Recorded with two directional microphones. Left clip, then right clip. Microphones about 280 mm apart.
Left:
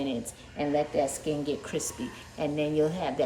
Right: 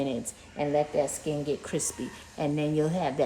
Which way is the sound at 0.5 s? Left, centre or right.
Centre.